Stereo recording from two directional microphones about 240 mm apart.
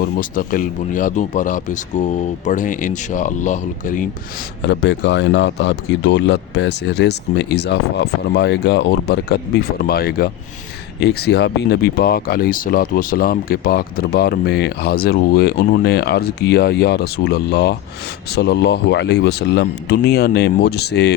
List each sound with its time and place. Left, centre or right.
0.0 s speech: left
4.6 s speech: left